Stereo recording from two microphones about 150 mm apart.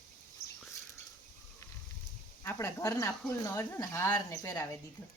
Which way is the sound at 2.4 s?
20° left (ahead or behind).